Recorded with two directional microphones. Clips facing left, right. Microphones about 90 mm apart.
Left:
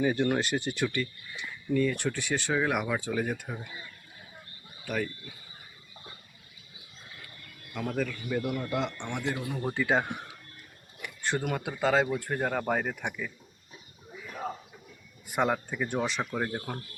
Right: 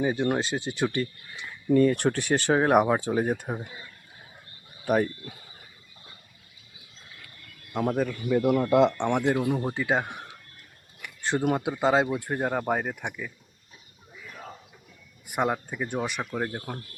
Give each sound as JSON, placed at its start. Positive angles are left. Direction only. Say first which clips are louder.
{"t": 0.0, "sound": "speech", "louder": "right 1 dB", "side_deg": -20}
{"t": 1.7, "sound": "speech", "louder": "right 7 dB", "side_deg": -45}
{"t": 4.9, "sound": "speech", "louder": "right 8 dB", "side_deg": -45}
{"t": 7.7, "sound": "speech", "louder": "right 5 dB", "side_deg": -35}
{"t": 8.7, "sound": "speech", "louder": "right 11 dB", "side_deg": -90}
{"t": 9.1, "sound": "speech", "louder": "right 9 dB", "side_deg": -50}
{"t": 9.6, "sound": "speech", "louder": "right 1 dB", "side_deg": -15}
{"t": 11.2, "sound": "speech", "louder": "right 5 dB", "side_deg": -25}
{"t": 15.3, "sound": "speech", "louder": "right 1 dB", "side_deg": -10}